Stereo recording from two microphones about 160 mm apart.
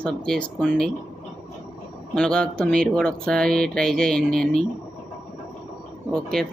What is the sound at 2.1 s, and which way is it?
Speech, 5° left (ahead or behind).